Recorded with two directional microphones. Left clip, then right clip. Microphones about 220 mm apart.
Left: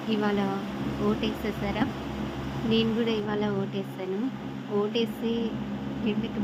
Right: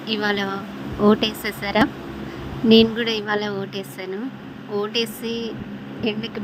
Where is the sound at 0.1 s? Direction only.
35° right (ahead or behind).